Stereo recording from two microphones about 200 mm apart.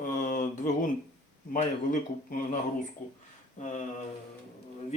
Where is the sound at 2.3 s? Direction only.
40° left (ahead or behind).